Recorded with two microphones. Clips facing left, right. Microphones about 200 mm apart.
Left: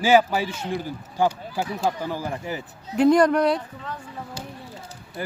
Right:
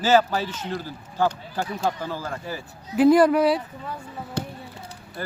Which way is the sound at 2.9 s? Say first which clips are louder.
Right 1 dB; 5° right (ahead or behind).